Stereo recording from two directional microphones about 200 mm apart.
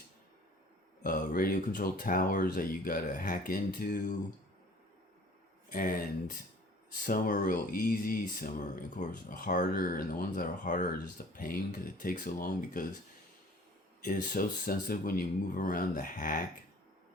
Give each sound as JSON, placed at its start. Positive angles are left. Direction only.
{"t": 1.0, "sound": "speech", "side_deg": 45}
{"t": 5.6, "sound": "speech", "side_deg": 45}
{"t": 14.0, "sound": "speech", "side_deg": 45}